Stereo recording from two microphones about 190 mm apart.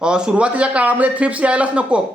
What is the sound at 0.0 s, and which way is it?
Speech, 5° right (ahead or behind).